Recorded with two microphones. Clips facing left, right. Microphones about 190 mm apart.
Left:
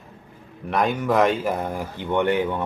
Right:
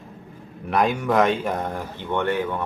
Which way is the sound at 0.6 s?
Centre (ahead or behind).